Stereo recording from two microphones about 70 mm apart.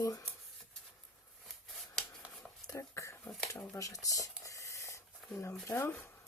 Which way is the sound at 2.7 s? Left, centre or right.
Left.